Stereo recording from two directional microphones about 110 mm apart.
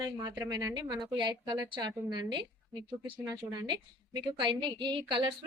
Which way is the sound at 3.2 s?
40° right (ahead or behind).